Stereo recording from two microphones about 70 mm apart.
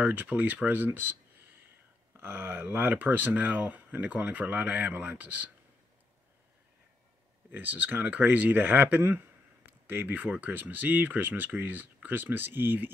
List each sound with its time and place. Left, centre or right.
0.0 s speech: right
7.5 s speech: right